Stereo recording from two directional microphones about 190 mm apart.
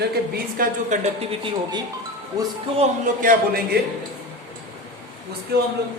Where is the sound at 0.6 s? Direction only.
40° right (ahead or behind).